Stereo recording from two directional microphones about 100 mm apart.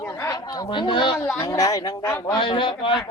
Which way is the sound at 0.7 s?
55° left (ahead or behind).